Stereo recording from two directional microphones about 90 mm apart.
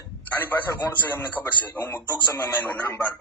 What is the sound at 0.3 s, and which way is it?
A man's voice, 20° left (ahead or behind).